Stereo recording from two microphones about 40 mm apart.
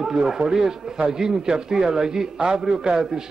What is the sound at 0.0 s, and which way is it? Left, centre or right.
A man's voice, centre.